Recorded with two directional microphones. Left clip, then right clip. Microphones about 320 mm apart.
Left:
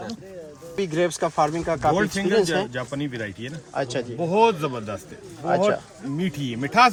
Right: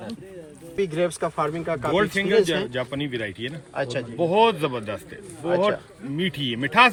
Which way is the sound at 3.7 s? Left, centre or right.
Left.